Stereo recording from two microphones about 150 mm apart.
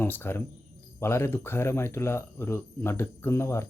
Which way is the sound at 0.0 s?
15° left (ahead or behind).